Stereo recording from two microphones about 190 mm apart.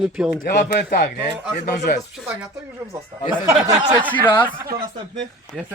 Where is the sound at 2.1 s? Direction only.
5° right (ahead or behind).